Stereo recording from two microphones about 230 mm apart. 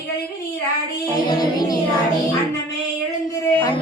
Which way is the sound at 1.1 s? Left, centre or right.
Centre.